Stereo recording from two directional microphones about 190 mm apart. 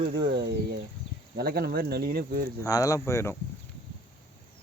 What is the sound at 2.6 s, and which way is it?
Speech, 15° left (ahead or behind).